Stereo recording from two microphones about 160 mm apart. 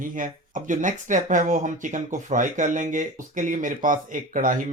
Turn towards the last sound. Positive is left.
turn(degrees=-55)  # may be behind; listen again after turning